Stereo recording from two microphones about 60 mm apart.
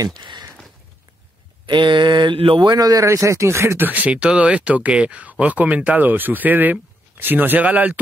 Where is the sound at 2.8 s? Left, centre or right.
Right.